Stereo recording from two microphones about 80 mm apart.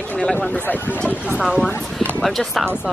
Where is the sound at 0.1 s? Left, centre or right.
Centre.